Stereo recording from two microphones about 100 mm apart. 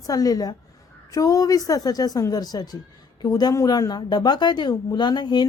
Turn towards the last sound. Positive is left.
turn(degrees=45)  # may be behind; listen again after turning